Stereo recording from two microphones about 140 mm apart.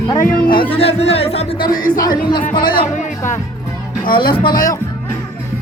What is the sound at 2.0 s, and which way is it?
Speech, 30° left (ahead or behind).